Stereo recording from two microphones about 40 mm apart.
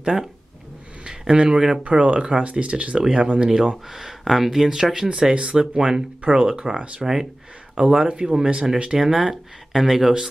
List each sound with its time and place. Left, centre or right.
1.0 s speech: right
1.9 s speech: right
2.1 s speech: centre
3.4 s speech: centre
5.3 s speech: right; by 10.1 s centre